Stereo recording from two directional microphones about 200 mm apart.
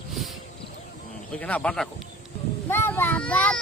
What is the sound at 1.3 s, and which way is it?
A child's voice, 5° left (ahead or behind).